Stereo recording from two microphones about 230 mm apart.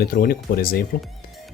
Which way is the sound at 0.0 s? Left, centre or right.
Left.